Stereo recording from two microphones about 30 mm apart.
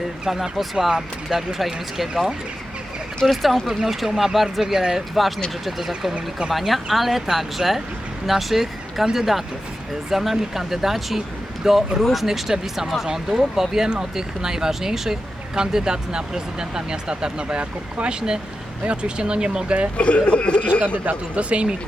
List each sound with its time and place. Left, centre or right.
0.3 s speech: centre
0.9 s speech: right
1.5 s speech: centre
3.2 s speech: centre
3.7 s speech: centre
5.6 s speech: centre; by 17.6 s right
17.6 s speech: right
18.1 s speech: right
20.0 s speech: left
20.8 s speech: right
21.3 s speech: right